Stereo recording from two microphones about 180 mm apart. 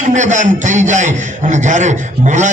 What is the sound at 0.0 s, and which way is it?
A man's voice, 40° right (ahead or behind).